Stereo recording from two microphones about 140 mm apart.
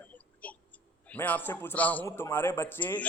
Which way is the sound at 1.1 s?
10° left (ahead or behind).